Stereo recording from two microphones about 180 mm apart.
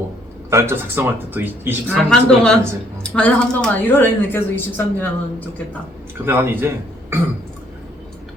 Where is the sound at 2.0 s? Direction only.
5° left (ahead or behind).